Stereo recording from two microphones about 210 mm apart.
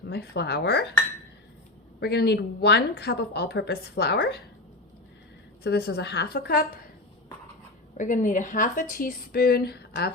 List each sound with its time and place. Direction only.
0.1 s a woman's voice: 50° left (ahead or behind)
2.0 s a woman's voice: 50° left (ahead or behind)
5.6 s a woman's voice: 50° left (ahead or behind)
7.9 s a woman's voice: 35° left (ahead or behind)